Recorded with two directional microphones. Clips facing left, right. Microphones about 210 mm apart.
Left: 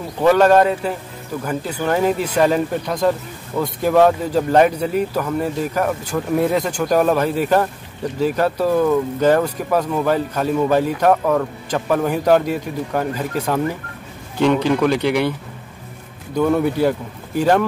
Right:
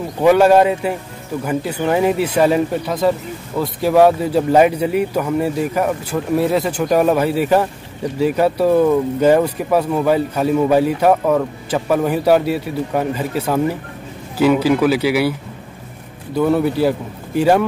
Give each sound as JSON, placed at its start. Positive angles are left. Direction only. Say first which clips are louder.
{"t": 0.2, "sound": "speech", "louder": "right 2 dB", "side_deg": -10}
{"t": 16.3, "sound": "speech", "louder": "right 1 dB", "side_deg": -5}